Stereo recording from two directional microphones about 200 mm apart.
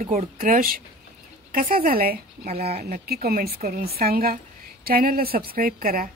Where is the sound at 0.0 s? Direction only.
40° right (ahead or behind).